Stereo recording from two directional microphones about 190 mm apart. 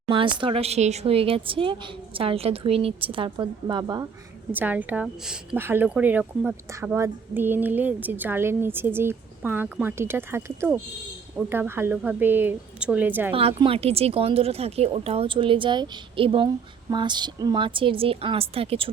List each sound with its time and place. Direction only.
0.1 s speech: 25° right (ahead or behind)
4.5 s speech: 10° right (ahead or behind)
13.6 s speech: 30° right (ahead or behind)